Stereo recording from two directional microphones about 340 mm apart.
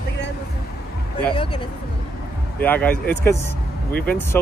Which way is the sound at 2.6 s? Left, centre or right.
Centre.